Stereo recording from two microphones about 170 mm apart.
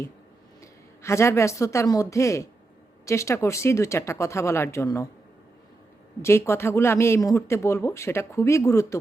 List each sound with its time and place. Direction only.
0.6 s a woman's voice: 15° left (ahead or behind)
6.2 s speech: 15° left (ahead or behind)